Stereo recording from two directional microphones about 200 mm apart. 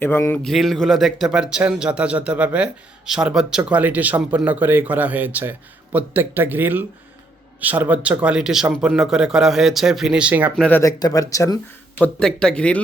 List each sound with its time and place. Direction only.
0.0 s speech: 10° left (ahead or behind); by 10.6 s 5° right (ahead or behind)
10.6 s speech: 10° left (ahead or behind)
12.0 s speech: 5° left (ahead or behind)